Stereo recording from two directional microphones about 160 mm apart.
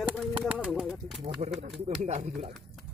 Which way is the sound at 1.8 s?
45° right (ahead or behind).